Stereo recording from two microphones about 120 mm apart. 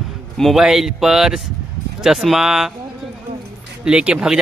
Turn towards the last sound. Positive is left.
turn(degrees=-5)  # may be behind; listen again after turning